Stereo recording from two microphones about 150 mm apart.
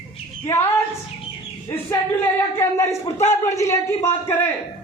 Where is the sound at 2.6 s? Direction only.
20° left (ahead or behind).